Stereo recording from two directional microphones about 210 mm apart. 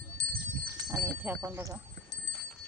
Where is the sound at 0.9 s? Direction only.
10° right (ahead or behind).